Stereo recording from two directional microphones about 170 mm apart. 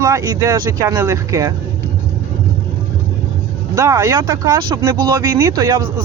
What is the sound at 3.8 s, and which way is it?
Speech, 20° right (ahead or behind).